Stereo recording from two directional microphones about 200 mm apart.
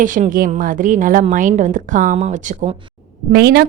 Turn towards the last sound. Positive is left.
turn(degrees=-50)  # may be behind; listen again after turning